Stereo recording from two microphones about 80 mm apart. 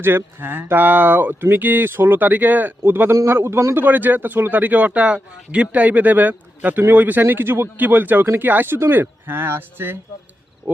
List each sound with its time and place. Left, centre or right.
0.0 s speech: right
3.8 s speech: right